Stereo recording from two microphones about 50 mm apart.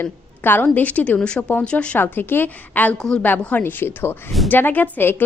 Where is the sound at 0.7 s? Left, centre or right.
Left.